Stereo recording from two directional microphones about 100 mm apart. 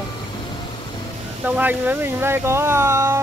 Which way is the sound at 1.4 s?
15° right (ahead or behind).